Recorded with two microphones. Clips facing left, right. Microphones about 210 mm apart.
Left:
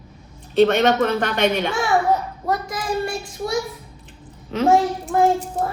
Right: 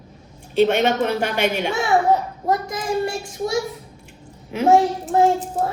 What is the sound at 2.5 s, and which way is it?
Child singing, 25° right (ahead or behind).